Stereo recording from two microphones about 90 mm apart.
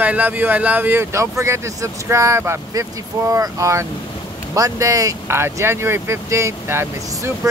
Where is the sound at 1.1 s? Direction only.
30° right (ahead or behind).